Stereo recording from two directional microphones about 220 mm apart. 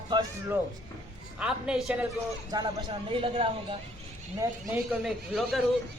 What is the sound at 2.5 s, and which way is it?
Speech, 20° right (ahead or behind).